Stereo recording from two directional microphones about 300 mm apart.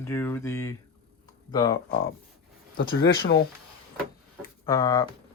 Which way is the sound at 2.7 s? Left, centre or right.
Left.